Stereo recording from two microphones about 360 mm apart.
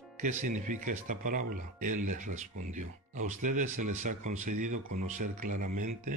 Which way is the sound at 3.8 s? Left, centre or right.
Right.